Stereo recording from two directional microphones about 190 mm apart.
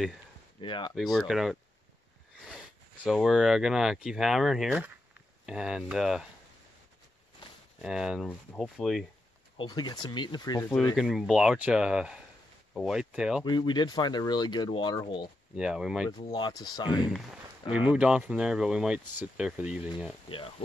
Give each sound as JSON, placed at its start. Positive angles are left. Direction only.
{"t": 0.6, "sound": "speech", "side_deg": 25}
{"t": 0.9, "sound": "speech", "side_deg": 0}
{"t": 7.8, "sound": "speech", "side_deg": -5}
{"t": 9.6, "sound": "speech", "side_deg": 20}
{"t": 11.0, "sound": "speech", "side_deg": 0}
{"t": 13.4, "sound": "speech", "side_deg": 20}
{"t": 15.5, "sound": "speech", "side_deg": -5}
{"t": 16.3, "sound": "speech", "side_deg": 20}
{"t": 17.7, "sound": "speech", "side_deg": -5}
{"t": 20.2, "sound": "speech", "side_deg": 30}